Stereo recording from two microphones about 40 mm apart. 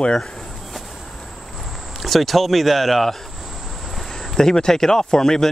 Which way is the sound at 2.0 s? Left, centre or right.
Centre.